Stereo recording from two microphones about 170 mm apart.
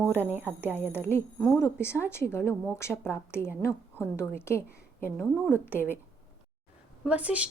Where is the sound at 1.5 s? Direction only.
15° left (ahead or behind).